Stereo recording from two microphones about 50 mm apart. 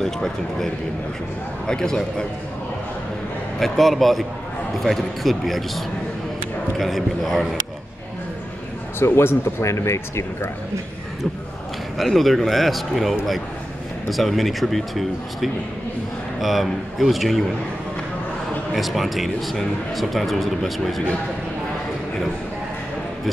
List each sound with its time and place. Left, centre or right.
0.0 s a man's voice: centre
1.7 s a man's voice: centre
3.5 s speech: centre
9.0 s speech: left
12.0 s speech: centre
14.1 s speech: centre
18.7 s speech: centre